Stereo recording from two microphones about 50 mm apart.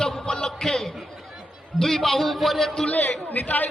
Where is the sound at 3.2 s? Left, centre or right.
Left.